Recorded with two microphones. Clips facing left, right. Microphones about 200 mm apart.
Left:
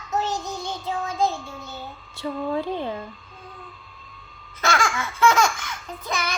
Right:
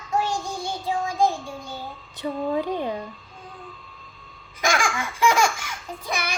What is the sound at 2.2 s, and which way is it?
Speech, 15° right (ahead or behind).